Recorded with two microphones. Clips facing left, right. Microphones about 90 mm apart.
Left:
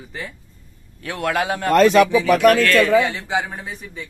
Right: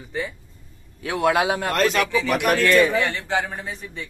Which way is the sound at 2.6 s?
15° right (ahead or behind).